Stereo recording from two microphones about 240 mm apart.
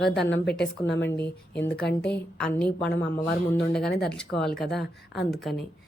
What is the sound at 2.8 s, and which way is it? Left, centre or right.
Speech, left.